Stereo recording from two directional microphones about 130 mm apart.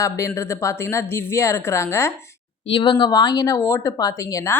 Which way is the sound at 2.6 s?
40° left (ahead or behind).